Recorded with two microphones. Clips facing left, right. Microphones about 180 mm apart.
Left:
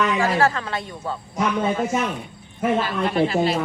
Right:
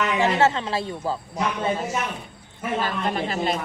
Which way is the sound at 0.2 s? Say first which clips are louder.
Even; 25° right (ahead or behind).